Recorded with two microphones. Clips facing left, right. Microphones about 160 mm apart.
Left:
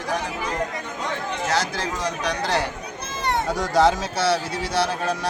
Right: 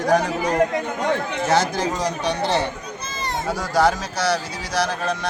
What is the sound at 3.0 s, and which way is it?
Run, 60° left (ahead or behind).